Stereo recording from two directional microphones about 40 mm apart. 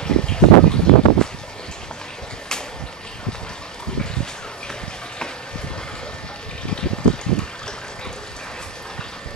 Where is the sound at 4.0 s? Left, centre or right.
Centre.